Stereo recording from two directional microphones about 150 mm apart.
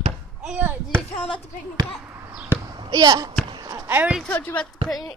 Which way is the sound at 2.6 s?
25° right (ahead or behind).